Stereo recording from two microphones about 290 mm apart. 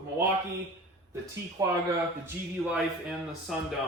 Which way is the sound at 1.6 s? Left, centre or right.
Centre.